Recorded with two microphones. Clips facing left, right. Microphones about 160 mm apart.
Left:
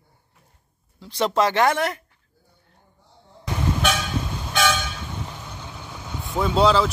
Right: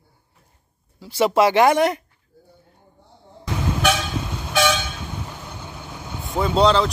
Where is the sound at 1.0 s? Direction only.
5° right (ahead or behind).